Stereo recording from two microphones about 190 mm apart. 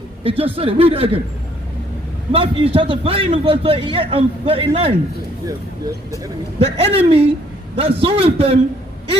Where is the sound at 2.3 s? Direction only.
30° right (ahead or behind).